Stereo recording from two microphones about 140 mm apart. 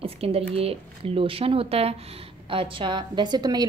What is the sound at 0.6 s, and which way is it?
A woman's voice, 45° right (ahead or behind).